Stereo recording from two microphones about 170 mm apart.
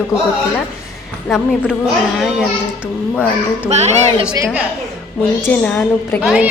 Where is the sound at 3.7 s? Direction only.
40° right (ahead or behind).